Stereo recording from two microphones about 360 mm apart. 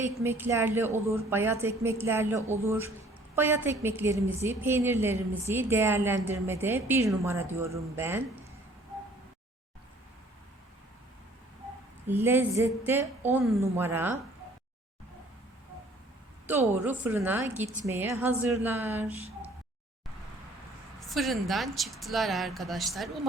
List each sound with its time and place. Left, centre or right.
0.0 s a woman's voice: centre
12.0 s a woman's voice: centre
16.5 s a woman's voice: centre
21.1 s speech: centre